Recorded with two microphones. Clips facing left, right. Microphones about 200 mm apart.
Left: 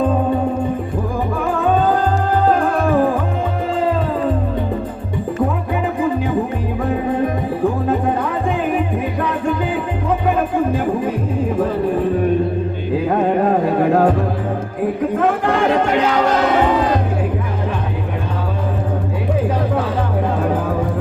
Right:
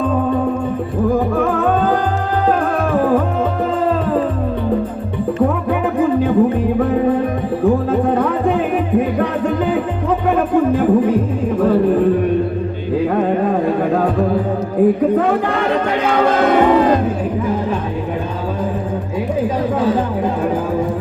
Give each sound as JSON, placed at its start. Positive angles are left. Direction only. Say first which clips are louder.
{"t": 16.0, "sound": "music", "louder": "right 2 dB", "side_deg": -55}